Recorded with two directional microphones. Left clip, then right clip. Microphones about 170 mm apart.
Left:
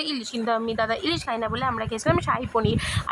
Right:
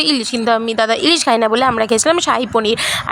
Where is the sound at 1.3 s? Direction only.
45° right (ahead or behind).